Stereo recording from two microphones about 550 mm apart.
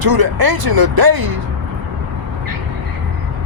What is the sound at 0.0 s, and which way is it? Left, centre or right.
Speech, right.